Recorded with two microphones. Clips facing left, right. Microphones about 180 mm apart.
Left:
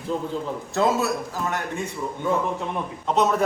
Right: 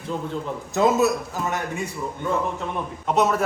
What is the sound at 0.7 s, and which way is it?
Speech, 20° right (ahead or behind).